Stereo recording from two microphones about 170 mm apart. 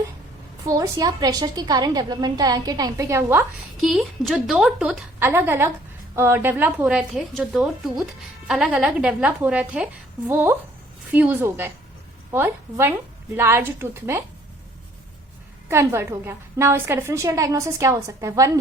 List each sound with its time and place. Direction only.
0.6 s a woman's voice: 20° right (ahead or behind)
3.8 s a woman's voice: centre (ahead or behind)
15.7 s a woman's voice: 15° right (ahead or behind)